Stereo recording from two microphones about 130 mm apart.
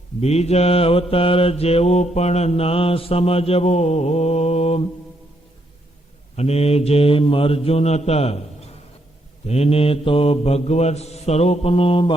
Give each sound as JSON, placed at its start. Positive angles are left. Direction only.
{"t": 0.2, "sound": "mantra", "side_deg": 55}
{"t": 6.3, "sound": "mantra", "side_deg": 55}
{"t": 9.5, "sound": "mantra", "side_deg": 50}